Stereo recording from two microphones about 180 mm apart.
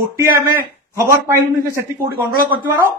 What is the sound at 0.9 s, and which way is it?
Speech, 15° right (ahead or behind).